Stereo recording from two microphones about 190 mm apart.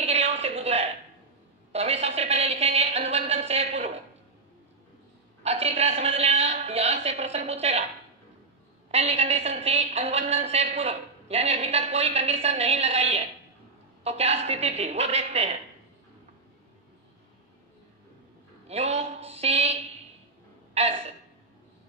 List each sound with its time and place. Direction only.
0.0 s a sound: 35° right (ahead or behind)
5.4 s a woman's voice: 35° right (ahead or behind)
8.9 s a woman's voice: 35° right (ahead or behind)
18.7 s a woman's voice: 35° right (ahead or behind)